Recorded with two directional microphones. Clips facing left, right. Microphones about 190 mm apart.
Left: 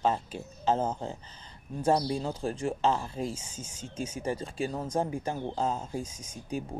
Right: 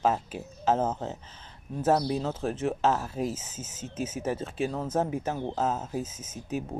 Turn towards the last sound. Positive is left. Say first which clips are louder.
# right 2 dB
turn(degrees=-5)  # may be behind; listen again after turning